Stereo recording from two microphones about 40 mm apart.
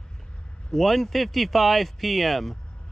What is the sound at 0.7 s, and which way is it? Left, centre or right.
Speech, centre.